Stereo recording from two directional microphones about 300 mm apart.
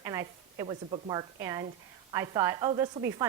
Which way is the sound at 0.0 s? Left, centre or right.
Centre.